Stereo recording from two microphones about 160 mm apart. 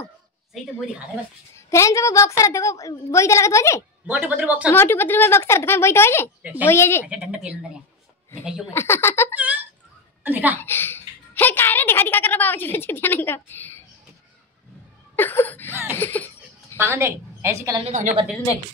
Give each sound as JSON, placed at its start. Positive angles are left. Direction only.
{"t": 1.7, "sound": "a woman's voice", "side_deg": 20}
{"t": 4.1, "sound": "a woman's voice", "side_deg": -10}
{"t": 4.6, "sound": "a woman's voice", "side_deg": 15}
{"t": 6.4, "sound": "a woman's voice", "side_deg": -10}
{"t": 6.7, "sound": "a woman's voice", "side_deg": 15}
{"t": 7.1, "sound": "a woman's voice", "side_deg": -5}
{"t": 8.7, "sound": "a woman's voice", "side_deg": 15}
{"t": 10.2, "sound": "a woman's voice", "side_deg": -10}
{"t": 10.6, "sound": "a woman's voice", "side_deg": 15}
{"t": 15.1, "sound": "a woman's voice", "side_deg": 10}
{"t": 15.7, "sound": "a woman's voice", "side_deg": -15}
{"t": 16.0, "sound": "a woman's voice", "side_deg": 10}
{"t": 16.7, "sound": "a woman's voice", "side_deg": -15}
{"t": 17.8, "sound": "a woman's voice", "side_deg": -50}